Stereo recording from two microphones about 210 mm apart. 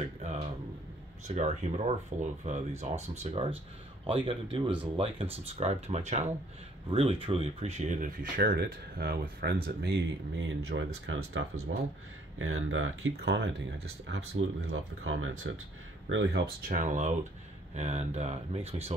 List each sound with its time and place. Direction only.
1.2 s speech: 30° right (ahead or behind); by 11.6 s 80° right
12.4 s speech: 70° right (ahead or behind)
13.1 s speech: 50° right (ahead or behind)
14.0 s speech: 75° right (ahead or behind)
16.6 s speech: 35° right (ahead or behind)